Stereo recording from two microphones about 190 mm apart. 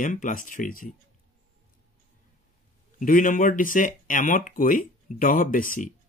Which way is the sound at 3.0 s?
45° left (ahead or behind).